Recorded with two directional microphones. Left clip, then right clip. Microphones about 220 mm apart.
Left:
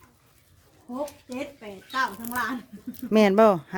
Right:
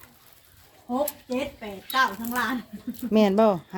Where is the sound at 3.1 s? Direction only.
25° left (ahead or behind).